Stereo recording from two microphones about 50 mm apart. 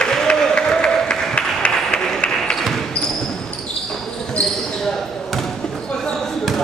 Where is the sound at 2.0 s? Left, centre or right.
Centre.